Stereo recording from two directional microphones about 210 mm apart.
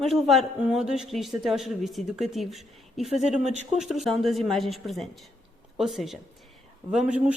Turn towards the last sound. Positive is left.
turn(degrees=-5)  # may be behind; listen again after turning